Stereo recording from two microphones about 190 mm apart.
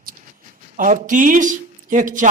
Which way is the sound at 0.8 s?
40° right (ahead or behind).